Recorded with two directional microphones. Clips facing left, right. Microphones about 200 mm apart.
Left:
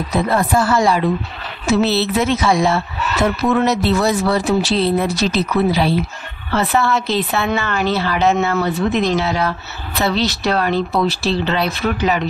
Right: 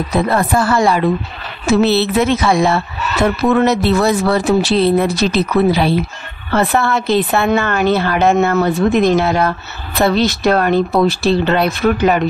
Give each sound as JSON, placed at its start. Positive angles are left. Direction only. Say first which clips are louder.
{"t": 0.1, "sound": "a woman's voice", "louder": "right 1 dB", "side_deg": -55}